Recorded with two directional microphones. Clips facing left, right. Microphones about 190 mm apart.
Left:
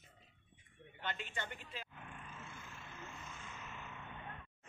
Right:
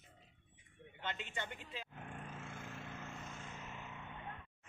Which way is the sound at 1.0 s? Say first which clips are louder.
Even; 20° right (ahead or behind).